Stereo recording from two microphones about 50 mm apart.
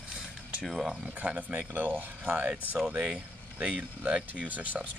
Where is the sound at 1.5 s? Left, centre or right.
Right.